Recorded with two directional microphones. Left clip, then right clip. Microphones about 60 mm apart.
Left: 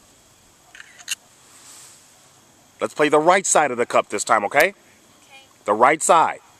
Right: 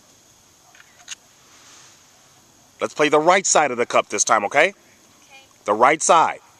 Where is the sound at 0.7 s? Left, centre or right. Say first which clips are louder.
Left 7 dB; left.